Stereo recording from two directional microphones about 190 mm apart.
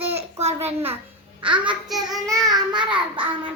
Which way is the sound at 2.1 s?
Centre (ahead or behind).